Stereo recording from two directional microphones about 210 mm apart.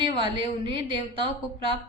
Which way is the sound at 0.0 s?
25° right (ahead or behind).